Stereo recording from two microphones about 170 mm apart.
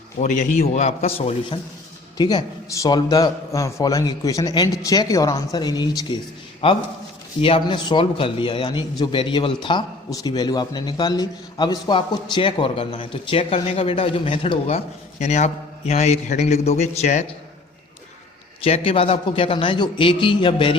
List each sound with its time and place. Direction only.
0.2 s a man's voice: 45° left (ahead or behind)
2.1 s a man's voice: 25° left (ahead or behind); by 17.2 s 40° left (ahead or behind)
18.6 s a man's voice: 35° left (ahead or behind)